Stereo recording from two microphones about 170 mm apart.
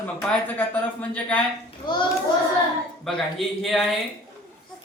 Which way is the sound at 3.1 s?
Centre (ahead or behind).